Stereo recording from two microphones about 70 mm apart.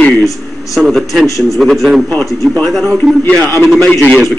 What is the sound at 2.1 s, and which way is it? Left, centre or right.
Speech, centre.